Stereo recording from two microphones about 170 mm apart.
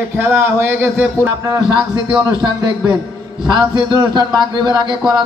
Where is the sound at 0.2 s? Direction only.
10° right (ahead or behind).